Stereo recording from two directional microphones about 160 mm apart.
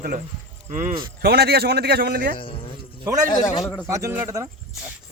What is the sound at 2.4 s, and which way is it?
Speech, 35° left (ahead or behind).